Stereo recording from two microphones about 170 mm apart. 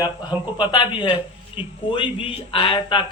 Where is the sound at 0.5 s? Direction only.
30° left (ahead or behind).